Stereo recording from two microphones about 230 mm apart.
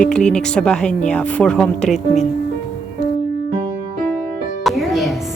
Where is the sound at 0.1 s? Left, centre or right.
Centre.